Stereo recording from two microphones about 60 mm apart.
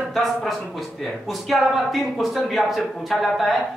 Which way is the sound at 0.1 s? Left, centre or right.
Centre.